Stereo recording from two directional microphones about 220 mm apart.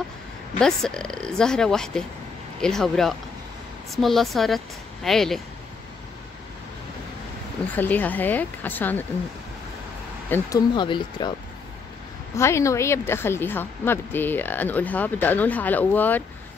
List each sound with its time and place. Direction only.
0.6 s speech: 5° left (ahead or behind)
7.7 s a woman's voice: 5° left (ahead or behind)
10.3 s speech: 20° left (ahead or behind)
12.4 s a woman's voice: 10° left (ahead or behind)